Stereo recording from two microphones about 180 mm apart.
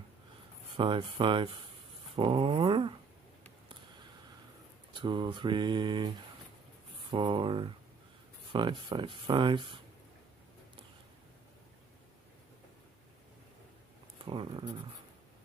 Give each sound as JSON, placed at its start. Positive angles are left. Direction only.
{"t": 0.7, "sound": "speech", "side_deg": -30}
{"t": 5.0, "sound": "speech", "side_deg": -25}
{"t": 14.2, "sound": "speech", "side_deg": -30}